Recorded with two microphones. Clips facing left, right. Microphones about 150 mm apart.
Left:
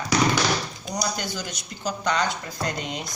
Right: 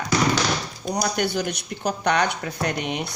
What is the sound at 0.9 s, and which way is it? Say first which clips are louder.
A woman's voice: right 6 dB; 55° right (ahead or behind).